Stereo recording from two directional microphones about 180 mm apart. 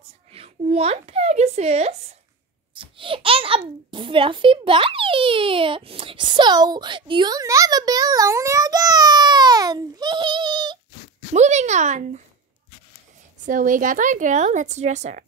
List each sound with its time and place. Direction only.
0.3 s a child's voice: 35° right (ahead or behind)
11.3 s speech: 40° right (ahead or behind)
13.5 s a woman's voice: 50° right (ahead or behind)